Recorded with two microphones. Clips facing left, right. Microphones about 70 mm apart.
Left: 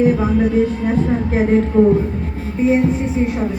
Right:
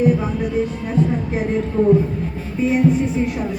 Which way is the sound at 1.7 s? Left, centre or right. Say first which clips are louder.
Left 4 dB; left.